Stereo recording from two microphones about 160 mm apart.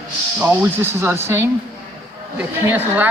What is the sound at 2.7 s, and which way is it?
Speech, 10° right (ahead or behind).